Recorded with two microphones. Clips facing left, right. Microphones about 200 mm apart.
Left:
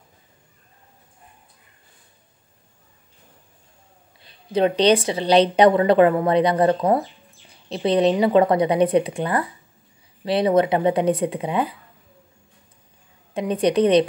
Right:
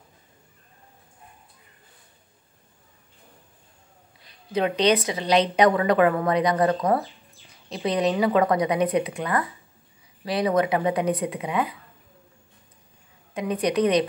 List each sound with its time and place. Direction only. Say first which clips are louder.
4.2 s a woman's voice: left 5 dB; 30° left (ahead or behind)
13.3 s a woman's voice: left 4 dB; 30° left (ahead or behind)